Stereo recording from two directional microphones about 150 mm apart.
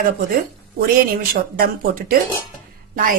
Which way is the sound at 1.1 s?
75° right (ahead or behind).